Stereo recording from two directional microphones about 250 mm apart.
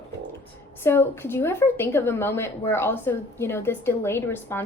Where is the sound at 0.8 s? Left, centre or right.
Centre.